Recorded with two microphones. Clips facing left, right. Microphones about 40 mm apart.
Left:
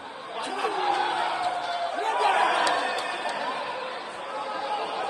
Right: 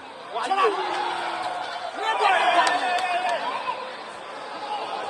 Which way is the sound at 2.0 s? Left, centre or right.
Right.